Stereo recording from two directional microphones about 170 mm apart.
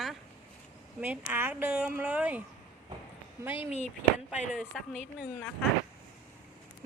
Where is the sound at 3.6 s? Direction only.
40° left (ahead or behind).